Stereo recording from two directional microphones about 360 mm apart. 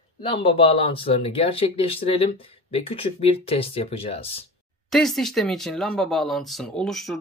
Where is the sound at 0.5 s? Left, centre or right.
Centre.